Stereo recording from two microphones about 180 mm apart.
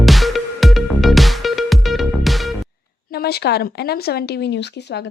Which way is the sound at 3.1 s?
60° left (ahead or behind).